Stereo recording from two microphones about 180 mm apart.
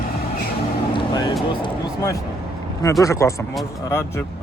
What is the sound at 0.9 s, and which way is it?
Music, 25° left (ahead or behind).